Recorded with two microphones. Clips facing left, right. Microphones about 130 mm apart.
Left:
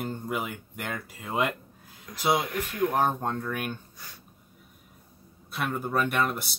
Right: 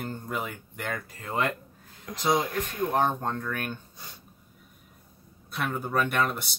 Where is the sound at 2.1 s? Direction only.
60° right (ahead or behind).